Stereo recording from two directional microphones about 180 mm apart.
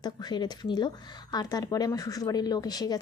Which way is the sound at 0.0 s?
20° left (ahead or behind).